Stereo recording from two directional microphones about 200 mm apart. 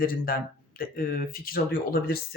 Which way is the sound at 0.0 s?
45° left (ahead or behind).